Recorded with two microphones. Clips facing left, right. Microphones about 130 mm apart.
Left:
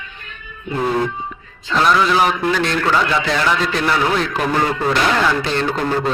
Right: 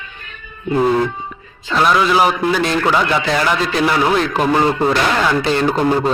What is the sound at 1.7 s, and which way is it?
A man's voice, 5° right (ahead or behind).